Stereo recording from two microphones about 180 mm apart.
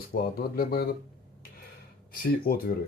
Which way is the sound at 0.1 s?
55° left (ahead or behind).